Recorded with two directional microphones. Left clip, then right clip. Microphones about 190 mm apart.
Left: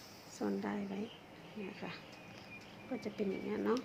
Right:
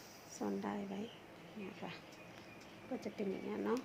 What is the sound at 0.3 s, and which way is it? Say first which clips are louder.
Speech: left 2 dB; 10° right (ahead or behind).